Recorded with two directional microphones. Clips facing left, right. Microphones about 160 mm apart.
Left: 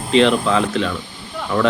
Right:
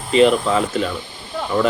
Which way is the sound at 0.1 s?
5° right (ahead or behind).